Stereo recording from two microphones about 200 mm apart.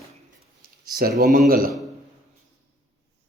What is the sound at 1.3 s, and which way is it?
Speech, 45° right (ahead or behind).